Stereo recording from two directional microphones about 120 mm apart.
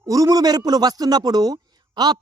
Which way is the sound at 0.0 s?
30° right (ahead or behind).